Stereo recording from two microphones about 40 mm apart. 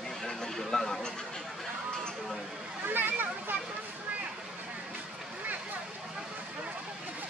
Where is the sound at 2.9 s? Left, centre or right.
Right.